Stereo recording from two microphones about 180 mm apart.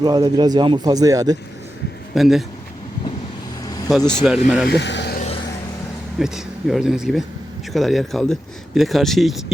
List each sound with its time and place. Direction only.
0.0 s a man's voice: 25° right (ahead or behind)
2.1 s speech: centre (ahead or behind)
3.6 s vehicle: 20° left (ahead or behind)
3.8 s speech: 5° left (ahead or behind)
4.7 s speech: 75° left (ahead or behind)
6.1 s speech: centre (ahead or behind)